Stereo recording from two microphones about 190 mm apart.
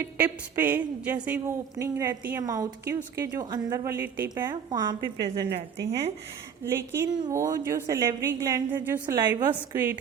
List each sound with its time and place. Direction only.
0.0 s a woman's voice: 10° right (ahead or behind)
4.7 s a woman's voice: 20° right (ahead or behind)
6.7 s a woman's voice: 15° right (ahead or behind)